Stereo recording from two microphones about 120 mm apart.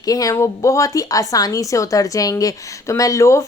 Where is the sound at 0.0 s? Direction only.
30° left (ahead or behind).